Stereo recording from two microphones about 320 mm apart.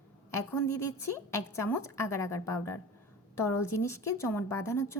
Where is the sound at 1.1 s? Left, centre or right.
Centre.